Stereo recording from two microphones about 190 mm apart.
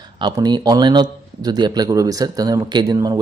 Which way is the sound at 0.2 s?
20° right (ahead or behind).